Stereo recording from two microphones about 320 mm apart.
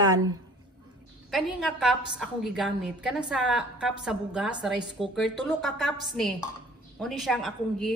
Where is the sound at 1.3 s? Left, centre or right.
Centre.